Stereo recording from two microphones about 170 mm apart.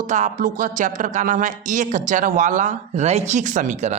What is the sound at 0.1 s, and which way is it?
Speech, 50° right (ahead or behind).